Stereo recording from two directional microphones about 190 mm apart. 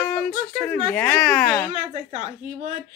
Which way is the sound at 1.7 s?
40° right (ahead or behind).